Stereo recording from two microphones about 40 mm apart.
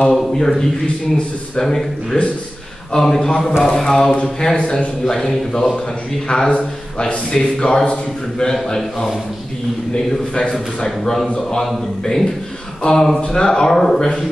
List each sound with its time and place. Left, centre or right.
0.1 s speech: centre
4.6 s a man's voice: left
5.0 s a man's voice: centre
6.5 s speech: left
7.3 s speech: centre
7.8 s a man's voice: left
8.6 s speech: centre
11.5 s speech: centre